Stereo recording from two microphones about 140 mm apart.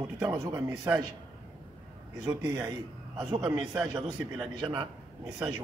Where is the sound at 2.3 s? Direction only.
25° right (ahead or behind).